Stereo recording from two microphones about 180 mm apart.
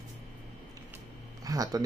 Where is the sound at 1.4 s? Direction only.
20° right (ahead or behind).